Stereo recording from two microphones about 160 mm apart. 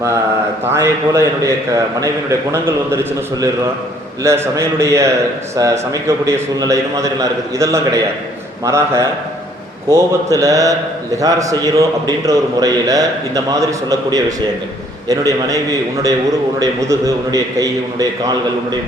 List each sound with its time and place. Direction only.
0.7 s a man's voice: 15° right (ahead or behind)